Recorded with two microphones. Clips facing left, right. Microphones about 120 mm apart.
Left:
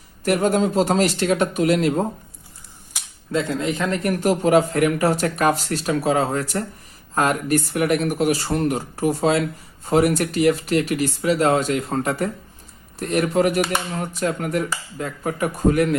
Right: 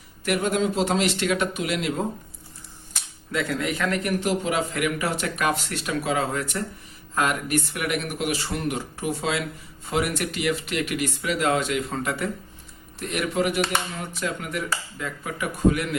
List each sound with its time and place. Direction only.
0.3 s speech: 40° left (ahead or behind)
3.3 s speech: 25° left (ahead or behind)
4.0 s speech: 40° left (ahead or behind)